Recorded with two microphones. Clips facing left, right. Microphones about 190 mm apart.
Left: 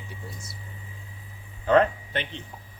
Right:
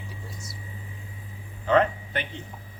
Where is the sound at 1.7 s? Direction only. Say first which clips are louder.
Left 1 dB; 35° left (ahead or behind).